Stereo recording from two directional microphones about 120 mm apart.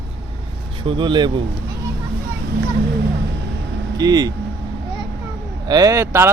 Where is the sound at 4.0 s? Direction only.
35° right (ahead or behind).